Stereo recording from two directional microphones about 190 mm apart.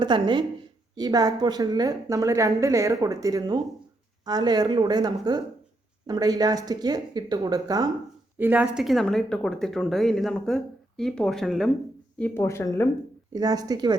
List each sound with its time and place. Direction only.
0.0 s a woman's voice: 25° right (ahead or behind)
8.4 s speech: 10° right (ahead or behind); by 12.9 s 15° left (ahead or behind)
13.3 s a woman's voice: 20° right (ahead or behind)